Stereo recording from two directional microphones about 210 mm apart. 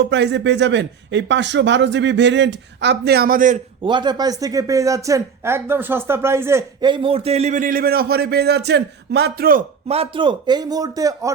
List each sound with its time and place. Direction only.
0.0 s speech: 55° right (ahead or behind); by 3.6 s 40° right (ahead or behind)
3.8 s speech: 20° right (ahead or behind); by 9.6 s 45° right (ahead or behind)
9.9 s speech: 25° right (ahead or behind)